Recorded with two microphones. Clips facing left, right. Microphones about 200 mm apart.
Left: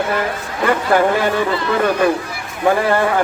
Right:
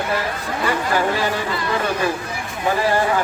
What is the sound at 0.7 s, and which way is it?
Speech, 55° left (ahead or behind).